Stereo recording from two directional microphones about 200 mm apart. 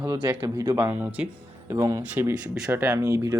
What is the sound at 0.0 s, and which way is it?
Speech, 15° right (ahead or behind).